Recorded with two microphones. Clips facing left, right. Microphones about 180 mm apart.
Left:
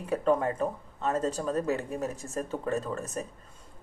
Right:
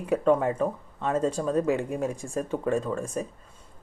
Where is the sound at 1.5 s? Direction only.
10° right (ahead or behind).